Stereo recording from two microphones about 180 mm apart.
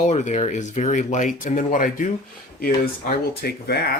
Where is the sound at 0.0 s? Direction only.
40° left (ahead or behind); by 3.9 s 60° left (ahead or behind).